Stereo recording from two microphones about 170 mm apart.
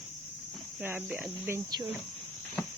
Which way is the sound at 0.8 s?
10° right (ahead or behind).